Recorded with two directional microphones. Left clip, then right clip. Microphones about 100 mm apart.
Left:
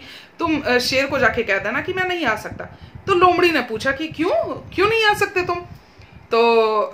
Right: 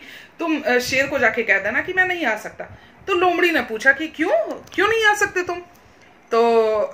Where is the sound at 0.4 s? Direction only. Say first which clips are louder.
Left 1 dB; 25° left (ahead or behind).